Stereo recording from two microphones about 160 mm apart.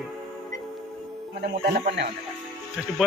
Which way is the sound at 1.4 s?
70° right (ahead or behind).